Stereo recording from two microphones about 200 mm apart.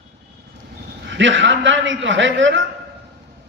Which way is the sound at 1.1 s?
65° right (ahead or behind).